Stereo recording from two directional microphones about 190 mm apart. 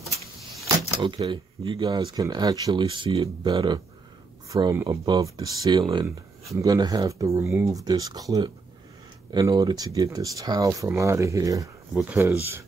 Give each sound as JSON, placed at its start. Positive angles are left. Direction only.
{"t": 1.0, "sound": "speech", "side_deg": -25}